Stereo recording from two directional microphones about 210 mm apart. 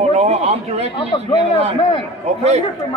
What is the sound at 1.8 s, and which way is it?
Speech, 25° left (ahead or behind).